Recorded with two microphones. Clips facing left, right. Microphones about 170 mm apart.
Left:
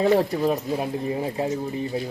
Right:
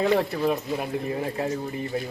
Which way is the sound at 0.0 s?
35° left (ahead or behind).